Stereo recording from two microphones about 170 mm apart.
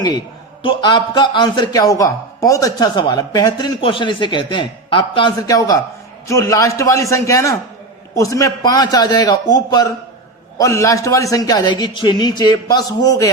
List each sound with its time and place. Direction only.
0.6 s a man's voice: 30° left (ahead or behind)